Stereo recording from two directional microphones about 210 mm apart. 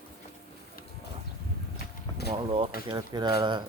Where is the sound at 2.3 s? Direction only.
25° right (ahead or behind).